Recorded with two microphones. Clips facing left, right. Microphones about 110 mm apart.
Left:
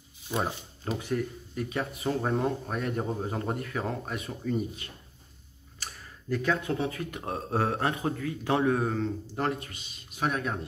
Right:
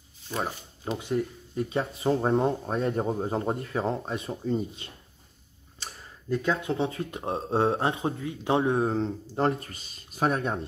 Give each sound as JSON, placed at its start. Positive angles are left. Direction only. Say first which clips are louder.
{"t": 0.3, "sound": "speech", "louder": "left 1 dB", "side_deg": 15}
{"t": 0.9, "sound": "speech", "louder": "right 2 dB", "side_deg": -25}
{"t": 5.8, "sound": "tick-tock", "louder": "right 1 dB", "side_deg": -20}
{"t": 6.7, "sound": "speech", "louder": "right 2 dB", "side_deg": -25}